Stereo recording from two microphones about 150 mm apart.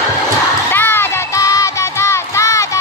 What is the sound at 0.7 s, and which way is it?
Music, 15° left (ahead or behind).